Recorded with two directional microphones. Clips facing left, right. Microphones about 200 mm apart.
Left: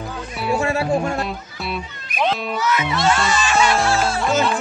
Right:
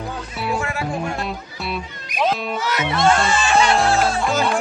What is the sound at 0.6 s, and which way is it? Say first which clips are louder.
Music: left 5 dB; 30° left (ahead or behind).